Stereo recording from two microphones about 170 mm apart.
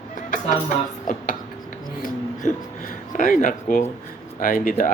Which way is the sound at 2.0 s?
50° left (ahead or behind).